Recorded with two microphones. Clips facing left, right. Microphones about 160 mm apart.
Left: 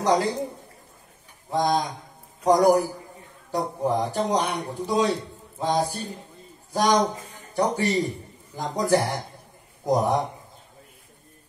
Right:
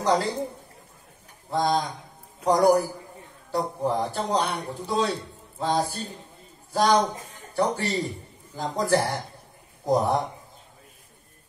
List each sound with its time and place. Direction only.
0.0 s a man's voice: 15° left (ahead or behind)
1.5 s a man's voice: 15° left (ahead or behind)